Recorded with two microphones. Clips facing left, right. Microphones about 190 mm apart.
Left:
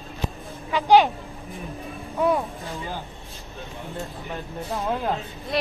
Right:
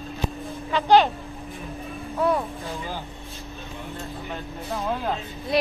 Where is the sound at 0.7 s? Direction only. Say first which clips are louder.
Left 1 dB; 10° left (ahead or behind).